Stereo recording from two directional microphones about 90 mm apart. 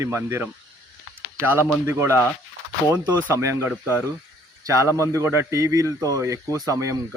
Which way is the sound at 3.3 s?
30° right (ahead or behind).